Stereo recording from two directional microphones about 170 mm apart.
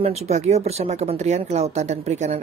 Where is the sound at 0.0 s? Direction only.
40° right (ahead or behind).